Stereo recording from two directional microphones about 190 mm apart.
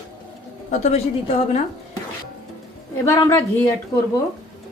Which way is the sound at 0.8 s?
35° left (ahead or behind).